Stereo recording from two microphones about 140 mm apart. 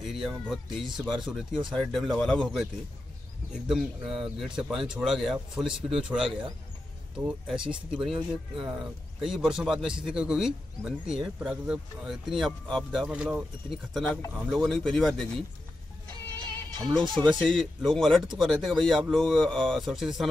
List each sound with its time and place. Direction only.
0.0 s speech: centre (ahead or behind)
6.2 s speech: 40° right (ahead or behind)
7.2 s speech: 5° right (ahead or behind)
13.1 s speech: 10° right (ahead or behind)
16.8 s speech: centre (ahead or behind)